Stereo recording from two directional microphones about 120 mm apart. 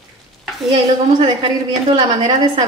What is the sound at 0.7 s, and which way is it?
Speech, 55° right (ahead or behind).